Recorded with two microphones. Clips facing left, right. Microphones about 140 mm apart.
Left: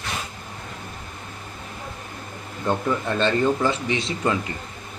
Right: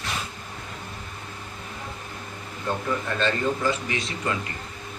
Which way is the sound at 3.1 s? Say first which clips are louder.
Left 5 dB; 25° left (ahead or behind).